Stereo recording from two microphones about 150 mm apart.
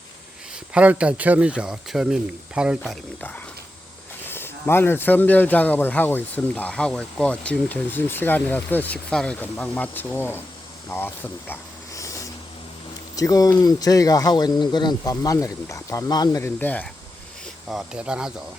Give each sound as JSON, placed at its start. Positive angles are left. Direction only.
{"t": 0.5, "sound": "speech", "side_deg": -10}
{"t": 4.3, "sound": "speech", "side_deg": 15}
{"t": 11.9, "sound": "vehicle", "side_deg": 20}
{"t": 13.1, "sound": "speech", "side_deg": 25}
{"t": 16.4, "sound": "speech", "side_deg": 10}
{"t": 17.7, "sound": "speech", "side_deg": -5}